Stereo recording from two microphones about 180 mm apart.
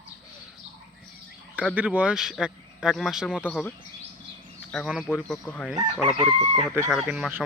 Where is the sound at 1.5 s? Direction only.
5° right (ahead or behind).